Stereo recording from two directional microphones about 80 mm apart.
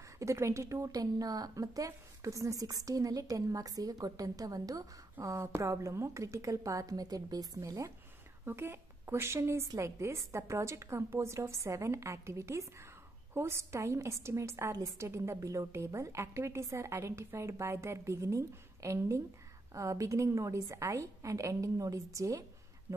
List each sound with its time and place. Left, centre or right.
0.2 s a woman's voice: right
8.5 s a woman's voice: right